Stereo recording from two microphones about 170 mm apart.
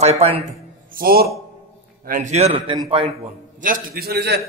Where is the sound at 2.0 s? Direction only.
45° right (ahead or behind).